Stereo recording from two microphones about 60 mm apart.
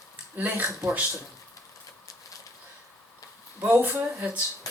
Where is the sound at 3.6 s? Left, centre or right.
Right.